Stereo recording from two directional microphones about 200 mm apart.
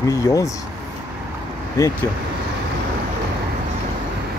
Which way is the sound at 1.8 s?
15° left (ahead or behind).